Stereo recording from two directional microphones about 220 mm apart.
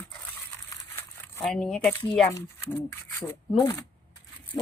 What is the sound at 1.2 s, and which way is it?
Speech, 5° left (ahead or behind).